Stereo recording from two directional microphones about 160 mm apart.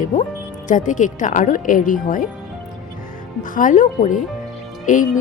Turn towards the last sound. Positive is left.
turn(degrees=55)  # may be behind; listen again after turning